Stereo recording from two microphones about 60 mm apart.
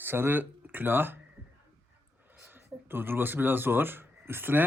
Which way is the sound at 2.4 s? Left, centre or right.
Right.